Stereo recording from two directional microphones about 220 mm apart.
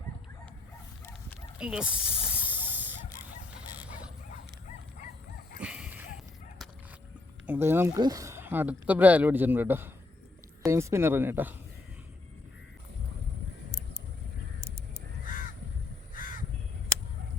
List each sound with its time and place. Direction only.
1.5 s snake: 5° right (ahead or behind)
5.5 s a sound: 5° right (ahead or behind)
7.4 s speech: 10° right (ahead or behind)
16.1 s crow: 40° left (ahead or behind)